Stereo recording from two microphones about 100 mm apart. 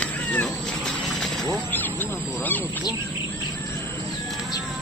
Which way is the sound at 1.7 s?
20° left (ahead or behind).